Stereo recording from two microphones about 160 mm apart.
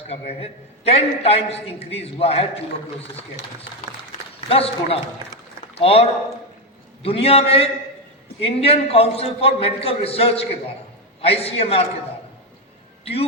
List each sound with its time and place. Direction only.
0.1 s a man's voice: 40° left (ahead or behind)
4.4 s a man's voice: 35° left (ahead or behind)